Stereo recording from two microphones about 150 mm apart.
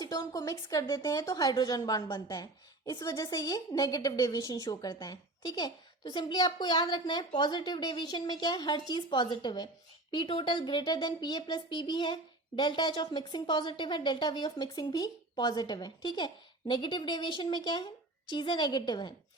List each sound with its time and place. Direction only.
0.0 s a woman's voice: 25° left (ahead or behind)